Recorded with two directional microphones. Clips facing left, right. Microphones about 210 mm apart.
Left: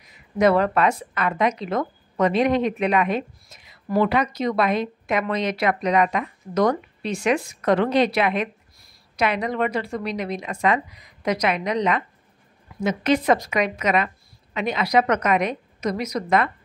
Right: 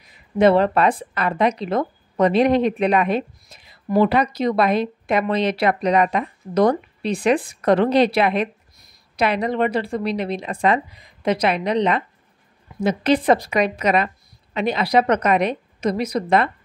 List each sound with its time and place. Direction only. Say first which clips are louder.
0.4 s speech: right 3 dB; 30° right (ahead or behind)